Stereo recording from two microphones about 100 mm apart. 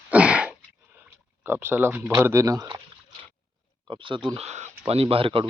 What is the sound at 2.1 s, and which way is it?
Speech, 30° right (ahead or behind).